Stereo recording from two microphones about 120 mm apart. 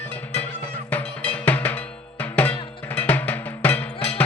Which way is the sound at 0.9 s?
10° left (ahead or behind).